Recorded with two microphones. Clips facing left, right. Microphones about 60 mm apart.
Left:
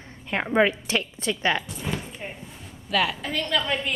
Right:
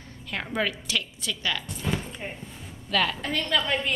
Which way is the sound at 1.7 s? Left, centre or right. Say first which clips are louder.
Right 1 dB; centre.